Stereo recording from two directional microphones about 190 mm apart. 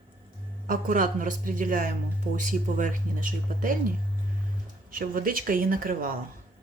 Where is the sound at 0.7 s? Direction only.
45° right (ahead or behind).